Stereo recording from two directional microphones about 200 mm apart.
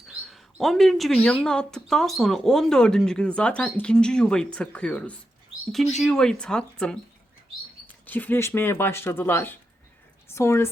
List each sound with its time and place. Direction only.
0.3 s a woman's voice: centre (ahead or behind)
8.0 s speech: 10° left (ahead or behind)